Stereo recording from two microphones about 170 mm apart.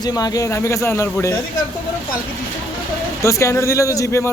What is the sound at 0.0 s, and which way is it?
Speech, 25° left (ahead or behind).